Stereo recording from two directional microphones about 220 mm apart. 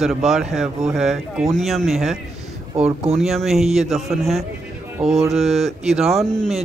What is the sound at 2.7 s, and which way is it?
Speech, 30° right (ahead or behind).